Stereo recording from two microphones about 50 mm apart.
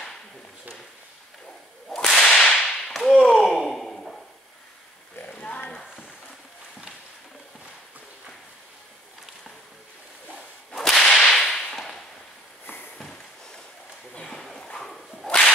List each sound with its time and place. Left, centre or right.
1.9 s whip: centre
3.3 s sigh: centre
5.4 s horse: left
10.7 s whip: centre
12.6 s a sound: left
12.9 s a sound: centre
14.1 s whip: centre